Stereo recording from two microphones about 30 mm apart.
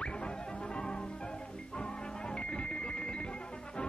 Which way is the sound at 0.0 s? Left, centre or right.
Left.